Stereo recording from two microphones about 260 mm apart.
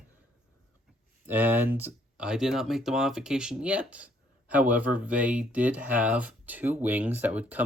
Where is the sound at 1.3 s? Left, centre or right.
Centre.